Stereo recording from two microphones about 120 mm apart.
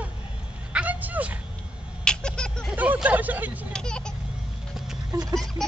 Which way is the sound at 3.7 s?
5° left (ahead or behind).